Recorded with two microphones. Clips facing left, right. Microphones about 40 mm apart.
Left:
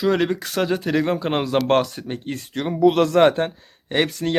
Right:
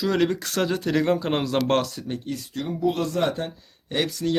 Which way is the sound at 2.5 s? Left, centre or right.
Left.